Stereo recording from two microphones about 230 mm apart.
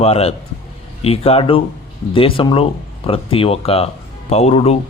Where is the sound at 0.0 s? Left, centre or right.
Left.